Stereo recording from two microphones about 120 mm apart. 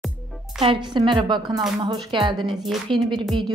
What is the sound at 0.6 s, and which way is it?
Speech, 40° right (ahead or behind).